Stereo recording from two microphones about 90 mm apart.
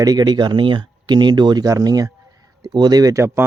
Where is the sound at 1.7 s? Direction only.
45° right (ahead or behind).